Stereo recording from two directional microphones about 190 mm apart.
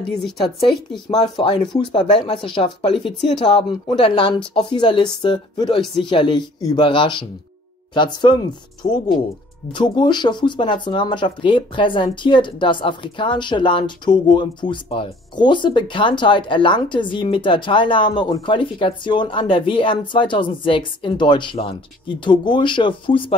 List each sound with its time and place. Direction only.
1.1 s speech: 25° left (ahead or behind)